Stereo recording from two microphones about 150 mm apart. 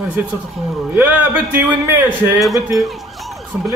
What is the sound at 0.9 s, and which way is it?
Speech, 15° right (ahead or behind).